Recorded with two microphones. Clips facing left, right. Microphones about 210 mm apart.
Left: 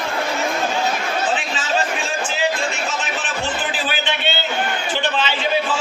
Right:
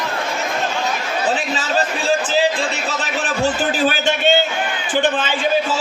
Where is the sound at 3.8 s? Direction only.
45° right (ahead or behind).